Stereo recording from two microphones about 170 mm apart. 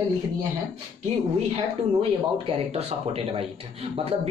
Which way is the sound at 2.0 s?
35° right (ahead or behind).